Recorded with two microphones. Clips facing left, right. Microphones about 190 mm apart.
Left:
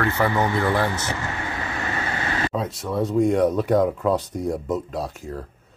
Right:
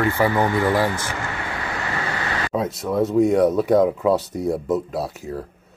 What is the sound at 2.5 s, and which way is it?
Speech, 10° right (ahead or behind).